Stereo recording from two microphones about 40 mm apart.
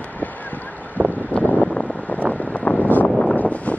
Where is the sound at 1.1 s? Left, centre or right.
Left.